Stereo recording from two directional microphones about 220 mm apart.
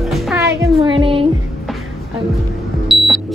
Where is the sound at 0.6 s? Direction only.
20° right (ahead or behind).